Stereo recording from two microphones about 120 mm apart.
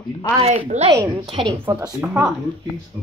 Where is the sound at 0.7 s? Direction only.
75° right (ahead or behind).